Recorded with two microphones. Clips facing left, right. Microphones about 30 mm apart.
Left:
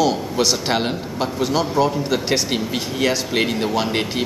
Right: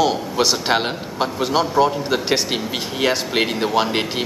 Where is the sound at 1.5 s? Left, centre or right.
Right.